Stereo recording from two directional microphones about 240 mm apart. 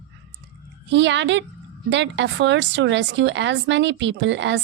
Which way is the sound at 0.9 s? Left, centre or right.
Right.